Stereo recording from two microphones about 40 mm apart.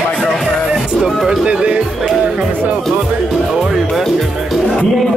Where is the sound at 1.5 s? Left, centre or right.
Right.